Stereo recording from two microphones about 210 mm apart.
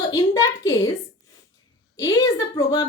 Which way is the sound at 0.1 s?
20° left (ahead or behind).